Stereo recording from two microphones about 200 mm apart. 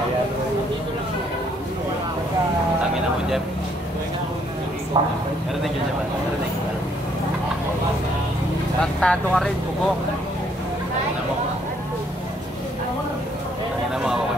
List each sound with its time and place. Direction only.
4.9 s a man's voice: 25° right (ahead or behind)
9.0 s speech: 5° left (ahead or behind)